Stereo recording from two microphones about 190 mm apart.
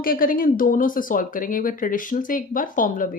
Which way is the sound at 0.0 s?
50° left (ahead or behind).